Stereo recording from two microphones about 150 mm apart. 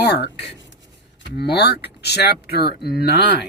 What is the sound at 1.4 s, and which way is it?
Speech, 90° left.